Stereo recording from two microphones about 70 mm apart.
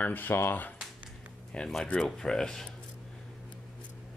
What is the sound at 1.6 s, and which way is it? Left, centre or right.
Speech, centre.